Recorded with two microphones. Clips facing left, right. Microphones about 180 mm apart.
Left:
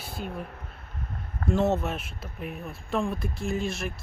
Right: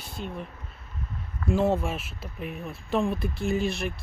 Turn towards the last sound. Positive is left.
turn(degrees=0)  # may be behind; listen again after turning